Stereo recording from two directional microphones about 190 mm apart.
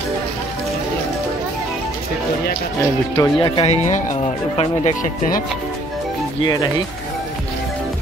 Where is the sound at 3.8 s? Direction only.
40° left (ahead or behind).